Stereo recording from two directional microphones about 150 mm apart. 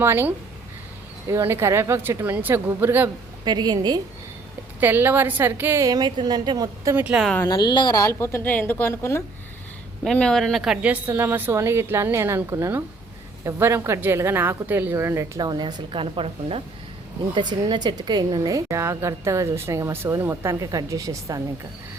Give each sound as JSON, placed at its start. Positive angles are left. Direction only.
{"t": 0.0, "sound": "a woman's voice", "side_deg": -15}
{"t": 3.4, "sound": "a woman's voice", "side_deg": -30}
{"t": 4.8, "sound": "a woman's voice", "side_deg": -15}
{"t": 6.9, "sound": "a woman's voice", "side_deg": -10}
{"t": 7.4, "sound": "a woman's voice", "side_deg": 30}
{"t": 10.0, "sound": "a woman's voice", "side_deg": 5}